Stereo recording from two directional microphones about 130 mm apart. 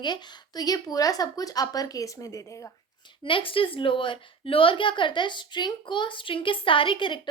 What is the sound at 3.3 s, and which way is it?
A woman's voice, 40° left (ahead or behind).